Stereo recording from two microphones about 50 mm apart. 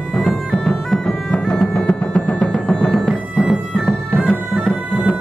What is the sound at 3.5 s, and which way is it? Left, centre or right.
Bagpipes, centre.